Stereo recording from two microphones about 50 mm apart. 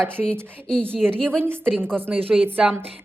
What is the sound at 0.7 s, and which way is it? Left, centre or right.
Speech, centre.